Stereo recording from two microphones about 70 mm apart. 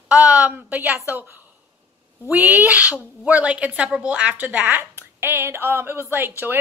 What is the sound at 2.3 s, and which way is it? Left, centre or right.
A woman's voice, right.